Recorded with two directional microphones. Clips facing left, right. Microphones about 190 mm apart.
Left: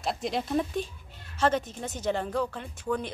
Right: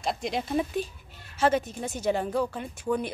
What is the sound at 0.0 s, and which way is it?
A woman's voice, centre (ahead or behind).